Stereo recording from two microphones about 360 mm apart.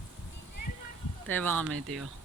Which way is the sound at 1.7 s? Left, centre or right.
Right.